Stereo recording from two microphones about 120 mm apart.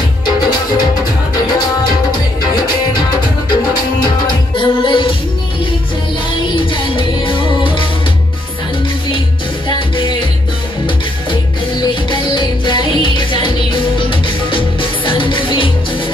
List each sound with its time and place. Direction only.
4.6 s music: 45° left (ahead or behind)
6.5 s music: 45° left (ahead or behind)
9.7 s music: 45° left (ahead or behind)
11.8 s music: 45° left (ahead or behind)